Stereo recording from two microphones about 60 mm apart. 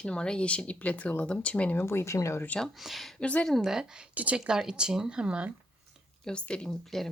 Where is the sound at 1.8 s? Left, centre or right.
Left.